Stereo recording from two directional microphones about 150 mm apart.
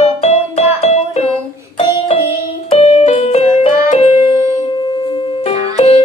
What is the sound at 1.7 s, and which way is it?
Music, 40° left (ahead or behind).